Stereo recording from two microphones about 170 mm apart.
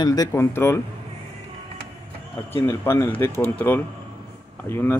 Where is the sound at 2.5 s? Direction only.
15° left (ahead or behind).